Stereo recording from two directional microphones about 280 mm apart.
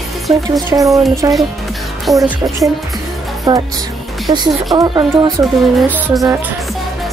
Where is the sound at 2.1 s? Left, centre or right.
Centre.